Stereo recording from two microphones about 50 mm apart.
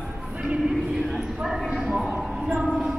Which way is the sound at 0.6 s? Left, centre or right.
Centre.